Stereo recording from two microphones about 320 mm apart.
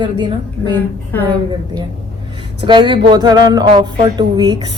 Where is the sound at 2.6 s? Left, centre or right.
Centre.